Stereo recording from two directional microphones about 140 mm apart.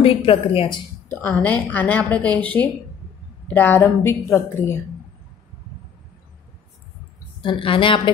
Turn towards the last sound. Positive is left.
turn(degrees=40)  # may be behind; listen again after turning